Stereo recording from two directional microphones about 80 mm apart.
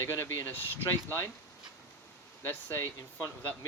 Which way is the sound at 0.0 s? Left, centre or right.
Left.